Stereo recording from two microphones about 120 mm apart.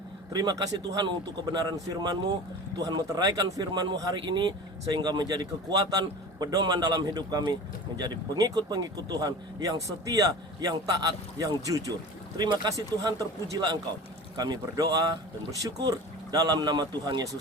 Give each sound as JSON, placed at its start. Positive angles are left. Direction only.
{"t": 0.3, "sound": "speech", "side_deg": -30}